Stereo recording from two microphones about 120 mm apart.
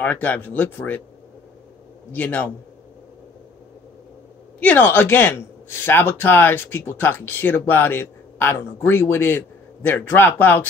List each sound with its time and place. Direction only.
0.0 s speech: 15° left (ahead or behind)
2.1 s speech: 15° left (ahead or behind)
4.6 s speech: 15° left (ahead or behind)